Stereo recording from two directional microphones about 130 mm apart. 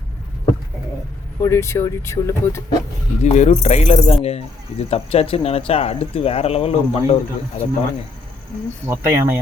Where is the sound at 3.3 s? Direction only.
60° left (ahead or behind).